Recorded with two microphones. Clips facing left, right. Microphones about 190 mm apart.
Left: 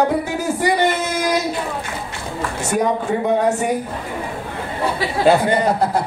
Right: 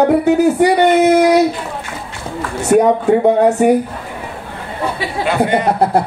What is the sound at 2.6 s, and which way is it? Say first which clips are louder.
Speech: right 9 dB; 60° right (ahead or behind).